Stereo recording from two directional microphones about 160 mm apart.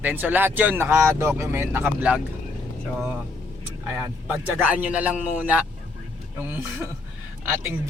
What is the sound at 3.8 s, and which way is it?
Speech, 15° right (ahead or behind).